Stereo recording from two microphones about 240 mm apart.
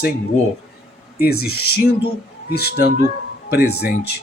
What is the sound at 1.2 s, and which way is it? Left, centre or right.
Speech, left.